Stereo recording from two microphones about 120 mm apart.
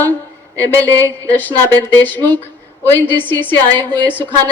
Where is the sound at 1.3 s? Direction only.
15° left (ahead or behind).